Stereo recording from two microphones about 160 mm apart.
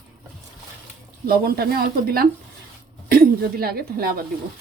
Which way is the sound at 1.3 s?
75° right (ahead or behind).